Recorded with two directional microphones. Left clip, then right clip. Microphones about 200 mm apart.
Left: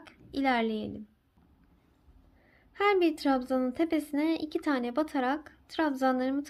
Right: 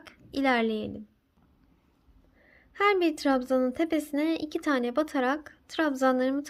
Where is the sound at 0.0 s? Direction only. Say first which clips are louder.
Right 2 dB; 20° right (ahead or behind).